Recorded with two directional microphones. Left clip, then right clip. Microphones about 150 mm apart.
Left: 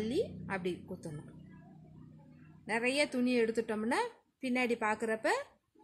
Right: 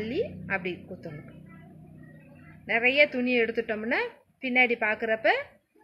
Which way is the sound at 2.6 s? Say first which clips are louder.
Right 10 dB; 90° left.